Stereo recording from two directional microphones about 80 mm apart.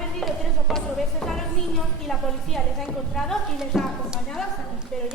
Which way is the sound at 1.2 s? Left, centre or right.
Centre.